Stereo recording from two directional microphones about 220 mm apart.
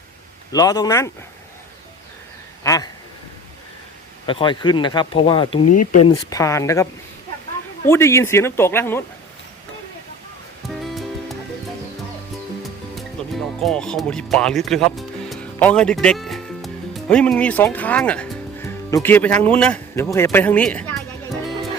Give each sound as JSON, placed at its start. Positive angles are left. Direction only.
{"t": 0.5, "sound": "a man's voice", "side_deg": 15}
{"t": 2.6, "sound": "a sound", "side_deg": 15}
{"t": 4.3, "sound": "a man's voice", "side_deg": 20}
{"t": 7.9, "sound": "a man's voice", "side_deg": 10}
{"t": 13.2, "sound": "music", "side_deg": 5}
{"t": 13.6, "sound": "a man's voice", "side_deg": 5}